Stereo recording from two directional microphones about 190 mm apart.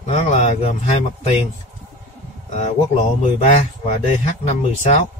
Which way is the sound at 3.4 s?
40° left (ahead or behind).